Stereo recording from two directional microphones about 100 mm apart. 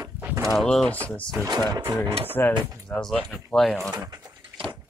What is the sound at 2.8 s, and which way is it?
Speech, 10° left (ahead or behind).